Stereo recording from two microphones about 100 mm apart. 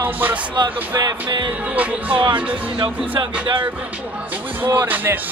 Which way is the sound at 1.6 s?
15° right (ahead or behind).